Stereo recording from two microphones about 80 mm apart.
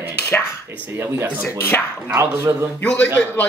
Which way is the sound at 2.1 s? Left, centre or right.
Right.